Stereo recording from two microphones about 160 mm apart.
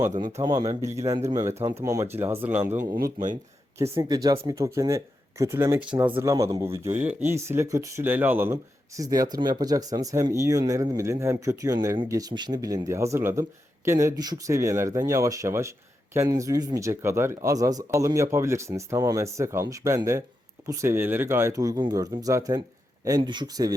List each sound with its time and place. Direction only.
0.2 s speech: 25° right (ahead or behind)
2.9 s speech: 60° right (ahead or behind)
3.9 s speech: 25° right (ahead or behind)